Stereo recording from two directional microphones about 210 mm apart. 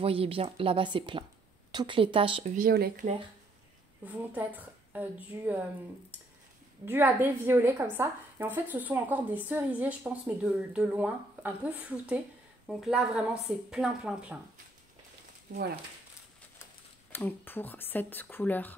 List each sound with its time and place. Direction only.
0.0 s speech: 25° right (ahead or behind)
2.5 s speech: 45° right (ahead or behind)
4.0 s a woman's voice: 10° right (ahead or behind)
6.9 s a woman's voice: 10° right (ahead or behind)
15.5 s speech: 45° right (ahead or behind)
17.1 s speech: 10° left (ahead or behind)